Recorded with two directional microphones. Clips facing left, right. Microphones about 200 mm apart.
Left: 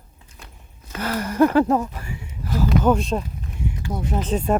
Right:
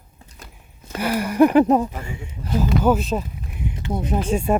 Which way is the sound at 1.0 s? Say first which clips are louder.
Right 2 dB; 10° right (ahead or behind).